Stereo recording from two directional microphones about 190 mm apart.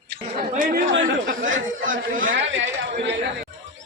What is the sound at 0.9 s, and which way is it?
Speech, 75° right (ahead or behind).